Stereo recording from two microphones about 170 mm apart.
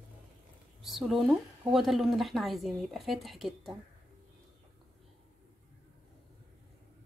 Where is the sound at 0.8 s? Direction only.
Centre (ahead or behind).